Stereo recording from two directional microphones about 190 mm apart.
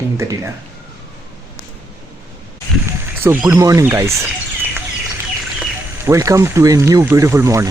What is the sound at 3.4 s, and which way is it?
Speech, 15° right (ahead or behind).